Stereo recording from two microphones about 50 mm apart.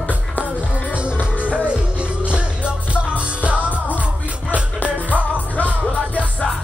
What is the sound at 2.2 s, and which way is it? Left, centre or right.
Music, right.